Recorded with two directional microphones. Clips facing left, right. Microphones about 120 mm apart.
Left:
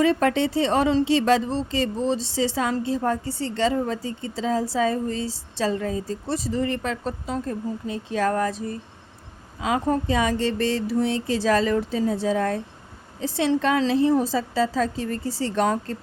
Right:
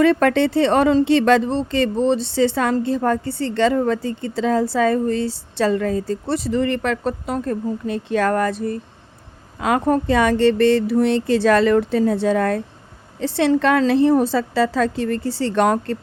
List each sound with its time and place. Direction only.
0.0 s a woman's voice: 65° right (ahead or behind)